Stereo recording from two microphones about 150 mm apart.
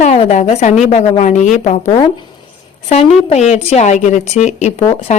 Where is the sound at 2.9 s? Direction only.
50° left (ahead or behind).